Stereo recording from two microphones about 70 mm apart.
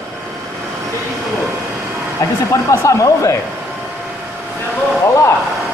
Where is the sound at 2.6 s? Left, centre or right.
Left.